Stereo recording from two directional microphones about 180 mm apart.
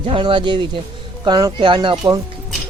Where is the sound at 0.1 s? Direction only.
30° right (ahead or behind).